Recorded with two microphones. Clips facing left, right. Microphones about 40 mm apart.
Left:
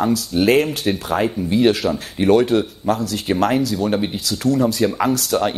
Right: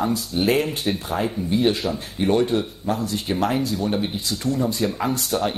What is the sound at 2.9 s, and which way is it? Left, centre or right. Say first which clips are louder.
Speech: left 4 dB; left.